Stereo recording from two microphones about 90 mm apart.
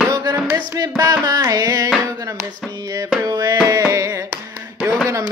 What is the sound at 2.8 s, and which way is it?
Music, 40° right (ahead or behind).